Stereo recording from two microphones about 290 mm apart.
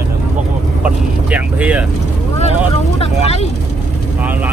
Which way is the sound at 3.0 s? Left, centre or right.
Left.